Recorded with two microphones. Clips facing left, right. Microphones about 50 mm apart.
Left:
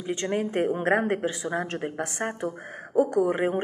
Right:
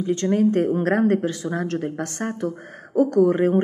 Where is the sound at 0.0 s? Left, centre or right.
Centre.